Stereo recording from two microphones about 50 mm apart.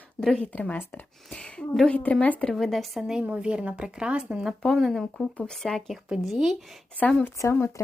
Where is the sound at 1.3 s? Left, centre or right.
Left.